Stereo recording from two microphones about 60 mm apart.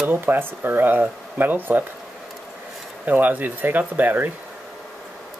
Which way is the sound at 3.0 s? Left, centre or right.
Right.